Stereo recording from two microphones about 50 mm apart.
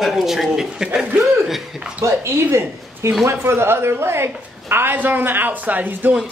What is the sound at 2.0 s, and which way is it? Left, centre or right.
A man's voice, right.